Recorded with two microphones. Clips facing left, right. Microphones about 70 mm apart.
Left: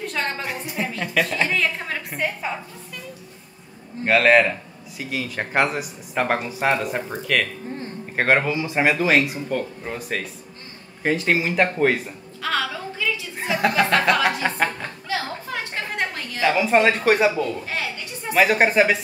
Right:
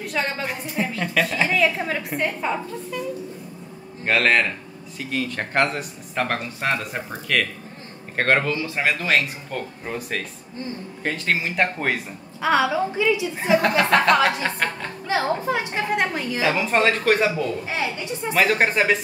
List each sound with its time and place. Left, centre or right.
0.0 s a woman's voice: centre
4.0 s speech: centre
12.4 s a woman's voice: centre
13.4 s speech: centre
15.0 s a sound: right
15.5 s a woman's voice: centre
16.4 s speech: centre